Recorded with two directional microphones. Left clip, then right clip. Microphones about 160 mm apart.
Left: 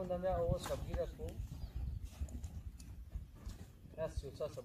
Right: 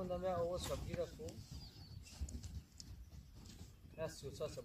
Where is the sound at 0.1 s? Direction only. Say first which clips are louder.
Left 3 dB; 90° right.